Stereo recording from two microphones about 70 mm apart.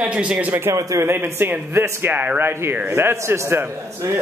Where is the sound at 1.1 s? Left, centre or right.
Right.